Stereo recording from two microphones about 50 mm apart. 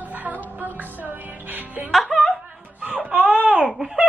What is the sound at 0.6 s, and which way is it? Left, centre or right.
Music, right.